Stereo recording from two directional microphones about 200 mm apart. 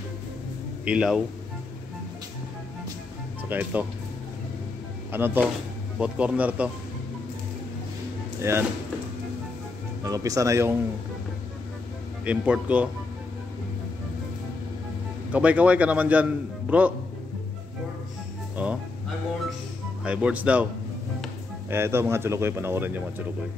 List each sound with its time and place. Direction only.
0.8 s speech: 5° right (ahead or behind)
3.4 s a man's voice: 10° right (ahead or behind)
5.1 s a man's voice: 10° right (ahead or behind)
8.4 s speech: 10° right (ahead or behind)
10.0 s a man's voice: 15° right (ahead or behind)
12.3 s a man's voice: 5° right (ahead or behind)
15.3 s a man's voice: 5° right (ahead or behind)
18.6 s a man's voice: 5° right (ahead or behind)
20.0 s a man's voice: 5° right (ahead or behind)
21.6 s a man's voice: 10° right (ahead or behind)